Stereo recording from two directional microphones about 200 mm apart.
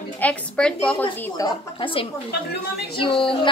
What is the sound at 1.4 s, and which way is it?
A woman's voice, 25° left (ahead or behind).